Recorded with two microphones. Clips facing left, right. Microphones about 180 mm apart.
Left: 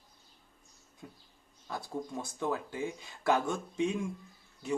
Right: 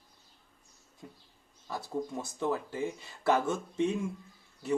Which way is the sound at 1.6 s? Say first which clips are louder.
Right 3 dB; 5° right (ahead or behind).